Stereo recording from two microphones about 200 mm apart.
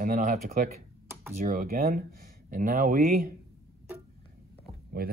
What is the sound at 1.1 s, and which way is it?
Computer keyboard, 10° right (ahead or behind).